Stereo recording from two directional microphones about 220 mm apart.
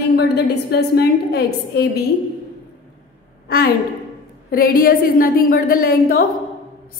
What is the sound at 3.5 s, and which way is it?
A woman's voice, 45° left (ahead or behind).